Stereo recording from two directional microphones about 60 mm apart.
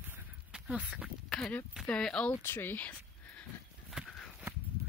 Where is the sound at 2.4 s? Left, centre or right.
Left.